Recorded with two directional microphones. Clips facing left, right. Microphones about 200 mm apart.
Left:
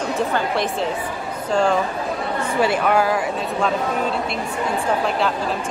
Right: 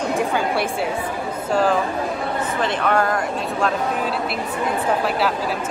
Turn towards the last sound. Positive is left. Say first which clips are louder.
# even
turn(degrees=-5)  # may be behind; listen again after turning